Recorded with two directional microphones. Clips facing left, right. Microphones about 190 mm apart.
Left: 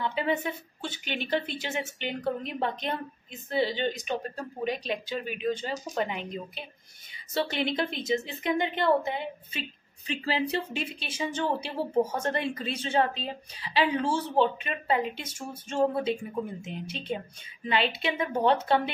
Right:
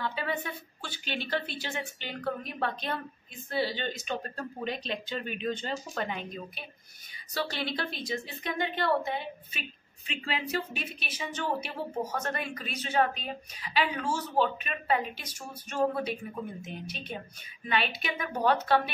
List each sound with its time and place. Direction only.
0.0 s speech: 20° left (ahead or behind)